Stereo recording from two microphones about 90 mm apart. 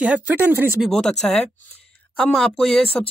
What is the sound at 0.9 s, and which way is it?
Speech, 5° left (ahead or behind).